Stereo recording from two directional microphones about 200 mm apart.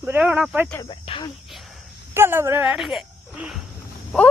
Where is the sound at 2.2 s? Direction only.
10° right (ahead or behind).